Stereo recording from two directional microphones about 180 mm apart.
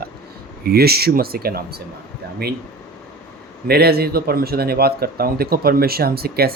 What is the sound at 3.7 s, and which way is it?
Speech, 60° right (ahead or behind).